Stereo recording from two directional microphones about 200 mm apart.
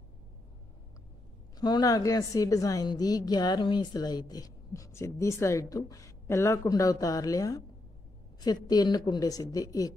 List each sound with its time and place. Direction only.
1.6 s a woman's voice: 20° left (ahead or behind)